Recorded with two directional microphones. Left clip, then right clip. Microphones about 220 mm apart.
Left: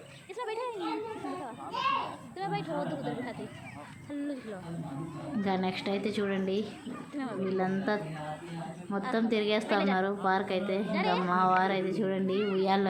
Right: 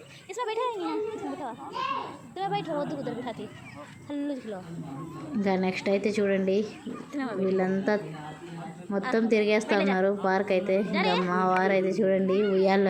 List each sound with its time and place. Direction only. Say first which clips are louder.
0.3 s a sound: right 6 dB; 25° right (ahead or behind)
2.4 s a woman's voice: right 4 dB; 25° right (ahead or behind)
4.1 s a woman's voice: right 4 dB; 25° right (ahead or behind)
5.4 s a woman's voice: right 4 dB; 15° right (ahead or behind)